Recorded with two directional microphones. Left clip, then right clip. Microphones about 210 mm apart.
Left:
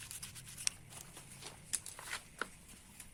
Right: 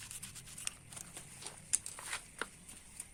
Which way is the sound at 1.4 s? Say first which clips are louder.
Right 4 dB; 20° right (ahead or behind).